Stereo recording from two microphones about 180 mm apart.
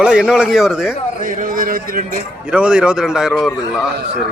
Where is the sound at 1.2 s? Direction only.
50° right (ahead or behind).